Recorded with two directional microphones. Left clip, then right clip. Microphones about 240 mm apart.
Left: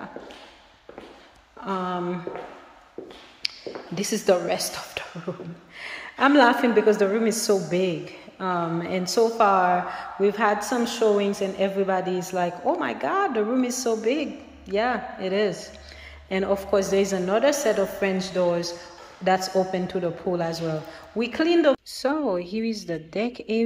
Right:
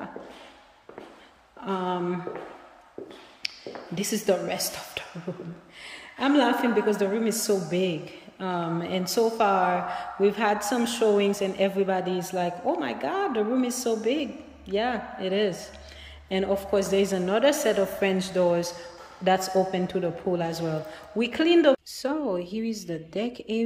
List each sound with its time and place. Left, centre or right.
1.6 s a woman's voice: centre
3.4 s a woman's voice: centre